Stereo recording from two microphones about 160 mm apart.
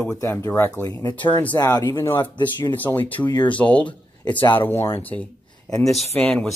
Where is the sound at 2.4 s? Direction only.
30° left (ahead or behind).